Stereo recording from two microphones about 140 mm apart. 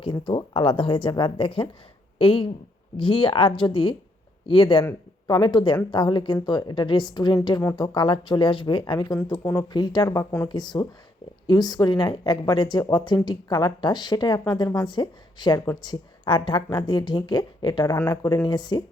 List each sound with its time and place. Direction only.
0.0 s a woman's voice: 35° left (ahead or behind); by 9.6 s 20° left (ahead or behind)
9.7 s speech: 30° left (ahead or behind)
10.5 s a woman's voice: 30° left (ahead or behind)
17.9 s a woman's voice: 25° left (ahead or behind)